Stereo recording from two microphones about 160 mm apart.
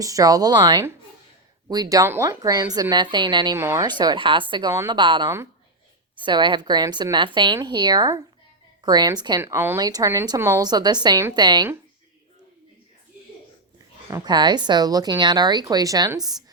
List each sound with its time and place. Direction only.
0.0 s speech: 20° right (ahead or behind)
3.6 s speech: 15° right (ahead or behind)
3.8 s speech: 25° right (ahead or behind)
9.4 s speech: 15° right (ahead or behind)
14.1 s speech: 25° right (ahead or behind)